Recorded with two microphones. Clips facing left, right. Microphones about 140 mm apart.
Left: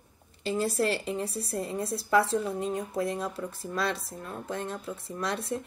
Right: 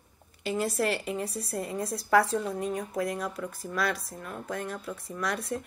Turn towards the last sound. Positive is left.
turn(degrees=25)  # may be behind; listen again after turning